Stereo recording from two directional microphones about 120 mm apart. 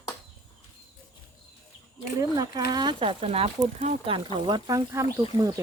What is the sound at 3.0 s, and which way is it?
Speech, 50° right (ahead or behind).